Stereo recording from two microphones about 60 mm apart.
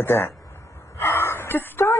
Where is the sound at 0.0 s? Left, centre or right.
Left.